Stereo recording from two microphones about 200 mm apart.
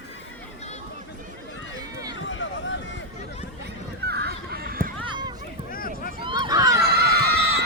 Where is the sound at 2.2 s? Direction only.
70° left (ahead or behind).